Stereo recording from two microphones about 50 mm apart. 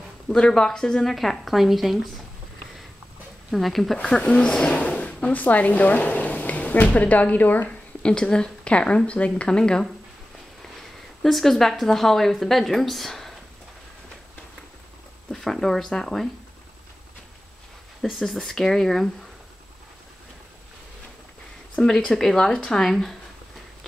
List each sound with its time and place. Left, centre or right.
0.3 s speech: centre
1.1 s a woman's voice: centre
3.5 s a woman's voice: centre
4.0 s speech: left
8.0 s speech: centre
10.6 s speech: centre
15.3 s speech: centre
18.0 s speech: centre
21.7 s speech: centre